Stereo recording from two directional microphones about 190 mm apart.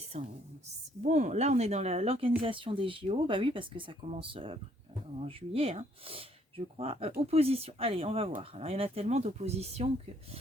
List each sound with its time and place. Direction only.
0.1 s speech: 35° right (ahead or behind)